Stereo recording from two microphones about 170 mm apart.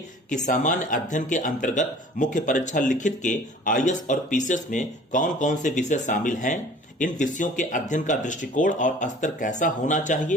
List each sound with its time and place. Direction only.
0.3 s speech: 45° left (ahead or behind)